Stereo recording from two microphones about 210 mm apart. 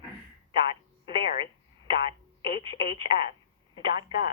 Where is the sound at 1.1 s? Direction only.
25° right (ahead or behind).